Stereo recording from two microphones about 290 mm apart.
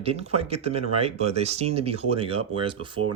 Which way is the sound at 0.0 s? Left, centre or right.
Right.